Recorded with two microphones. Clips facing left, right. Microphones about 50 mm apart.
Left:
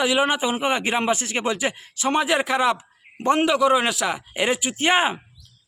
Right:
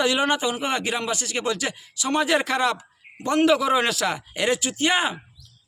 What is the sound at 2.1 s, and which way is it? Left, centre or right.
Speech, centre.